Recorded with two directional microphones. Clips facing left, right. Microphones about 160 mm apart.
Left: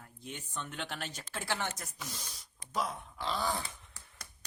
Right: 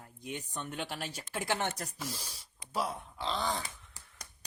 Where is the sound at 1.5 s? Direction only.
55° right (ahead or behind).